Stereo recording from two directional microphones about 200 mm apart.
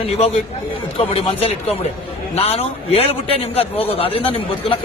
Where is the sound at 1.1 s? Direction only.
30° left (ahead or behind).